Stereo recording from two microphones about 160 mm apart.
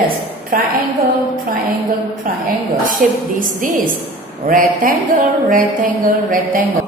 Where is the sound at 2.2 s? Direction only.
60° right (ahead or behind).